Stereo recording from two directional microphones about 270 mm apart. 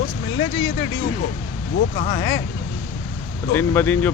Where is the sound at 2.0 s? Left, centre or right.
Left.